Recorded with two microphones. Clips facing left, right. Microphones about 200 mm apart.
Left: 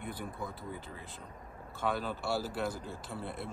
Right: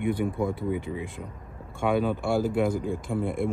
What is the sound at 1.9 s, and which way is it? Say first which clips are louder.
Speech: right 10 dB; 55° right (ahead or behind).